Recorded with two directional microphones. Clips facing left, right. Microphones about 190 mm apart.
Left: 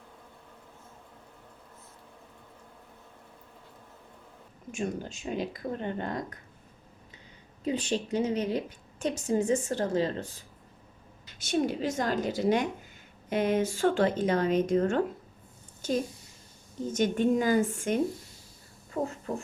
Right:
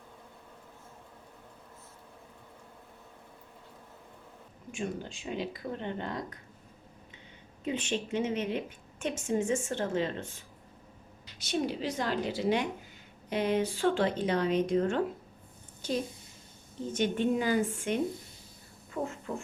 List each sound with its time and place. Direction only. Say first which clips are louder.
4.7 s speech: left 3 dB; 45° left (ahead or behind)
7.6 s a woman's voice: left 3 dB; 35° left (ahead or behind)
11.3 s speech: left 4 dB; 50° left (ahead or behind)
19.0 s a sound: left 3 dB; 25° left (ahead or behind)